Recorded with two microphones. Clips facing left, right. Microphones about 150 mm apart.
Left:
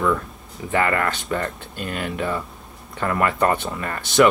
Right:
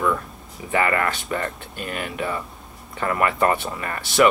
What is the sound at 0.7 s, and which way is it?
Speech, 5° right (ahead or behind).